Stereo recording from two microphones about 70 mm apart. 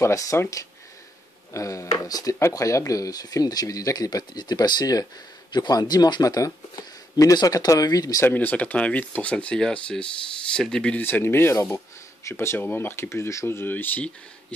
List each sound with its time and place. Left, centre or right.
0.0 s speech: left
2.5 s speech: left
6.2 s speech: left
8.2 s speech: left; by 11.0 s centre
11.0 s speech: left